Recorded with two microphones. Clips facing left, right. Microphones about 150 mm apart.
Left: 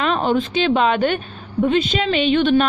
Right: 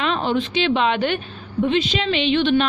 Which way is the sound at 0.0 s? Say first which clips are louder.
Left 3 dB; 45° left (ahead or behind).